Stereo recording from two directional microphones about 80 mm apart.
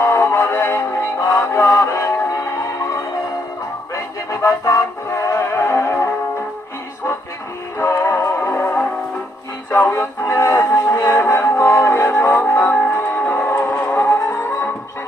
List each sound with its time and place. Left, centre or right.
0.0 s music: left
8.0 s music: left